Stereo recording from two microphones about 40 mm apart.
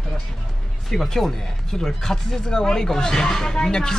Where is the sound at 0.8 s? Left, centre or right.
Centre.